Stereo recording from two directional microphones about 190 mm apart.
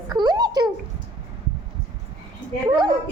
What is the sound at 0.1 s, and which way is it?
Babbling, 20° right (ahead or behind).